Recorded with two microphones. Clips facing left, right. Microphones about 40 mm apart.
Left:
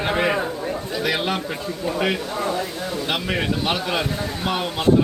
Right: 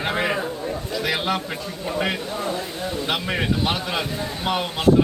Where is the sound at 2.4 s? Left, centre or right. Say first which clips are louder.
Left 3 dB; left.